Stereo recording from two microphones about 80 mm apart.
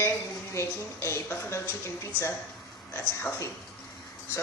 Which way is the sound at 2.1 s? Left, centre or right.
Right.